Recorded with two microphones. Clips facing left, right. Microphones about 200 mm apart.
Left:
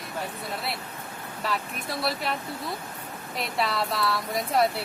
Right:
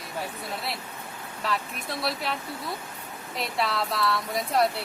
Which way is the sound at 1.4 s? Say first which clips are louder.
Even; centre (ahead or behind).